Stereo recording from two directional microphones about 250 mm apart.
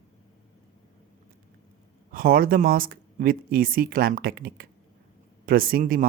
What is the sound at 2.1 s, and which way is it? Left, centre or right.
Speech, right.